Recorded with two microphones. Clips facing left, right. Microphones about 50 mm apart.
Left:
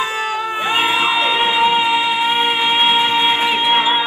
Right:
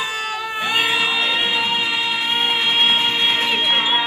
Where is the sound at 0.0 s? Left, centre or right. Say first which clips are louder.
Left 4 dB; left; by 3.8 s centre.